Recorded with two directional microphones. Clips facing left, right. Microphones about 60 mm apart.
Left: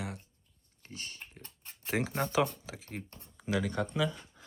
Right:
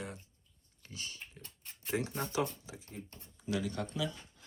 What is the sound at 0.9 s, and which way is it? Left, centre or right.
Speech, left.